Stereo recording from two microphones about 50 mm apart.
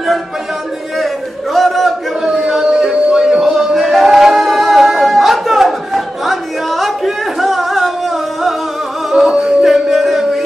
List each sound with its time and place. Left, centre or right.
0.9 s a sound: centre
3.1 s music: centre
9.1 s music: centre